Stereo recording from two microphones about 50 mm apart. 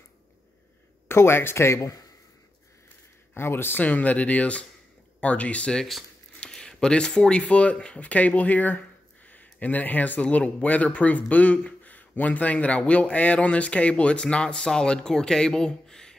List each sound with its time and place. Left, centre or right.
1.0 s speech: left
3.3 s speech: left
3.8 s speech: left
6.4 s speech: centre